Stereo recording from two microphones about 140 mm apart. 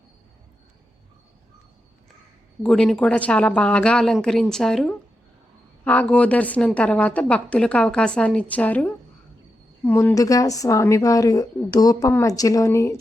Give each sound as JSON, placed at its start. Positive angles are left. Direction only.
{"t": 2.6, "sound": "a woman's voice", "side_deg": 5}